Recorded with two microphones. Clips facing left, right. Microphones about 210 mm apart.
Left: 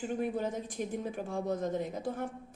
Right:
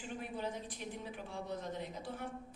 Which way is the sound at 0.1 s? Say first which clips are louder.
Left 7 dB; 45° left (ahead or behind).